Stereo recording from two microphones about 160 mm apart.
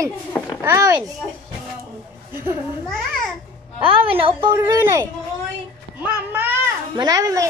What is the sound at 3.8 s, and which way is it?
Speech, 35° right (ahead or behind).